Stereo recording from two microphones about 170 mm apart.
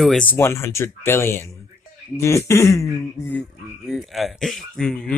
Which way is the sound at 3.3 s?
5° left (ahead or behind).